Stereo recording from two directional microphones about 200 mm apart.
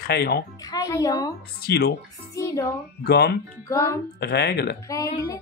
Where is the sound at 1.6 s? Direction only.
50° left (ahead or behind).